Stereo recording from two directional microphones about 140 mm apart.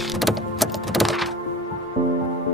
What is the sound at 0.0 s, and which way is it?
Music, centre (ahead or behind).